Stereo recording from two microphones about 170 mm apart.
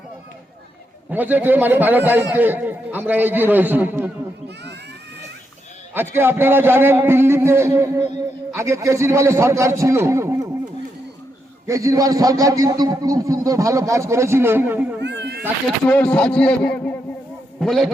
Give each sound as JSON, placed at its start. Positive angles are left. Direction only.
{"t": 1.1, "sound": "a man's voice", "side_deg": -10}
{"t": 6.1, "sound": "a man's voice", "side_deg": -15}
{"t": 11.6, "sound": "a man's voice", "side_deg": -20}
{"t": 15.0, "sound": "cat", "side_deg": -80}
{"t": 15.6, "sound": "a man's voice", "side_deg": 5}